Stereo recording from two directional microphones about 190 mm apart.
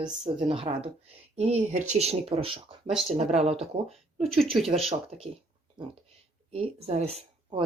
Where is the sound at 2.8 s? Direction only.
Centre (ahead or behind).